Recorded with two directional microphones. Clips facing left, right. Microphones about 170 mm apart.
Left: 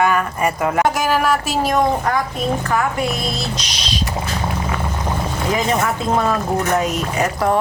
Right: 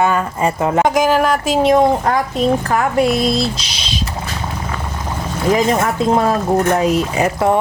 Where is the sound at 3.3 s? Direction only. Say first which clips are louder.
Right 6 dB; 35° right (ahead or behind).